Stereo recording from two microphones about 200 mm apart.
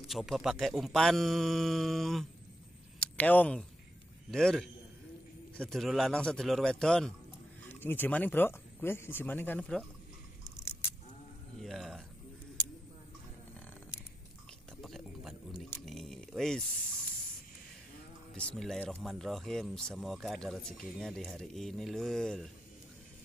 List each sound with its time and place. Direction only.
0.0 s speech: centre (ahead or behind)
11.6 s speech: centre (ahead or behind)
14.8 s a sound: centre (ahead or behind)
18.3 s speech: 5° left (ahead or behind)